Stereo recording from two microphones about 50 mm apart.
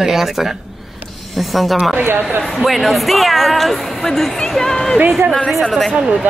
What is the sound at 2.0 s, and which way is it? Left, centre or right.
Speech, right.